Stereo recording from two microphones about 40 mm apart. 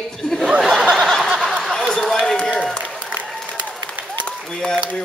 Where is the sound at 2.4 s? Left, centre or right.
Left.